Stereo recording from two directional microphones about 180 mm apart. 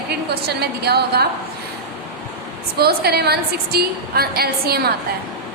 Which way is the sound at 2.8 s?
60° right (ahead or behind).